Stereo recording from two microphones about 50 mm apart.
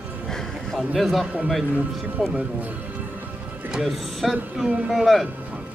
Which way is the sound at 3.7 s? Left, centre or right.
Centre.